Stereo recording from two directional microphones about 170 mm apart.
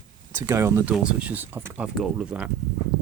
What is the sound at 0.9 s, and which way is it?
Speech, 5° right (ahead or behind).